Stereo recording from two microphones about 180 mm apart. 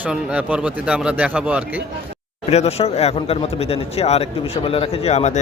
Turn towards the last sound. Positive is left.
turn(degrees=40)  # may be behind; listen again after turning